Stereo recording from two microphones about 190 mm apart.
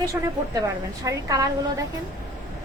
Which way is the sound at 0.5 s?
15° right (ahead or behind).